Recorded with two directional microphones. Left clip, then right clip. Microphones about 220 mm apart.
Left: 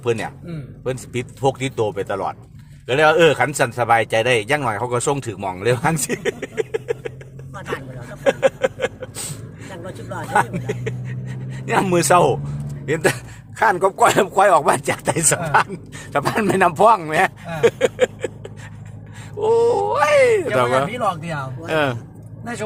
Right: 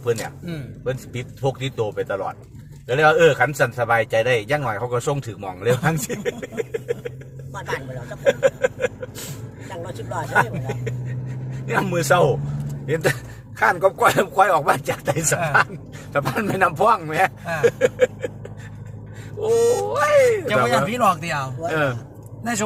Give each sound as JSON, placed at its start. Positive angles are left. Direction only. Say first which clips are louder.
{"t": 0.0, "sound": "a man's voice", "louder": "left 2 dB", "side_deg": 45}
{"t": 8.2, "sound": "a sound", "louder": "left 1 dB", "side_deg": 45}
{"t": 10.3, "sound": "a man's voice", "louder": "left 2 dB", "side_deg": 50}
{"t": 20.9, "sound": "speech", "louder": "right 3 dB", "side_deg": -45}
{"t": 21.7, "sound": "a man's voice", "louder": "left 3 dB", "side_deg": 40}